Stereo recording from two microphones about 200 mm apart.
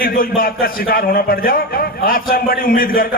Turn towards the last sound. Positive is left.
turn(degrees=45)  # may be behind; listen again after turning